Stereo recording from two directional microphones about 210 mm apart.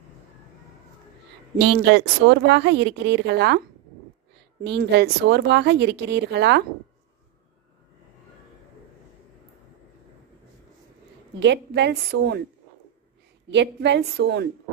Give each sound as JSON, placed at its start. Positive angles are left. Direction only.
{"t": 1.6, "sound": "speech", "side_deg": -55}
{"t": 4.6, "sound": "speech", "side_deg": -55}
{"t": 11.3, "sound": "speech", "side_deg": -55}
{"t": 13.5, "sound": "speech", "side_deg": -55}